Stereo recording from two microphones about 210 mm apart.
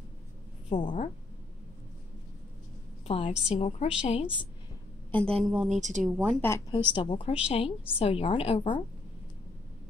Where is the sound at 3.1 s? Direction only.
30° left (ahead or behind).